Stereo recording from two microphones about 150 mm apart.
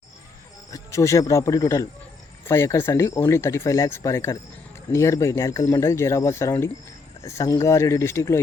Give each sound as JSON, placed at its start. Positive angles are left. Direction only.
{"t": 0.7, "sound": "speech", "side_deg": 20}